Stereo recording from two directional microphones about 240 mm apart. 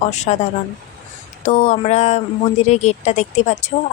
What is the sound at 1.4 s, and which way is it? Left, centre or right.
Speech, left.